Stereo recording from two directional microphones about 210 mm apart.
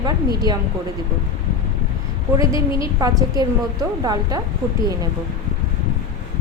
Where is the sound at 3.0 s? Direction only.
15° right (ahead or behind).